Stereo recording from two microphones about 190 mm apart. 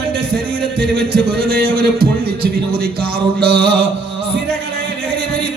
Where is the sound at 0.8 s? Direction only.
55° right (ahead or behind).